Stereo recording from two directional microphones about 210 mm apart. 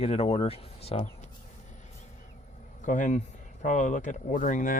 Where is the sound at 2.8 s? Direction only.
35° left (ahead or behind).